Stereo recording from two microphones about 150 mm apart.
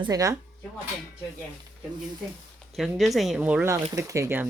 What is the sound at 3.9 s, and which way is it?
Speech, 20° right (ahead or behind).